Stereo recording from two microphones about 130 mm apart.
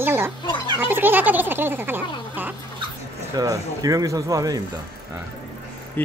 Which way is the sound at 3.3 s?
25° right (ahead or behind).